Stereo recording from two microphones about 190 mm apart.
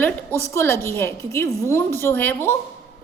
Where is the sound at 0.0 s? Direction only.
10° left (ahead or behind).